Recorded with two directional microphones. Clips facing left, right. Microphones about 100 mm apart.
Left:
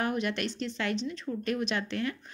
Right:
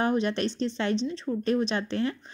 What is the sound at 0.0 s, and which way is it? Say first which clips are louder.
A woman's voice: right 5 dB; 30° right (ahead or behind).